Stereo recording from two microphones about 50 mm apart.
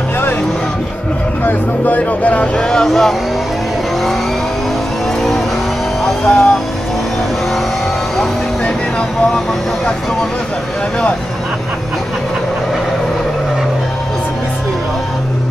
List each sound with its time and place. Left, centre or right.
1.4 s speech: left
2.7 s speech: centre
6.2 s speech: left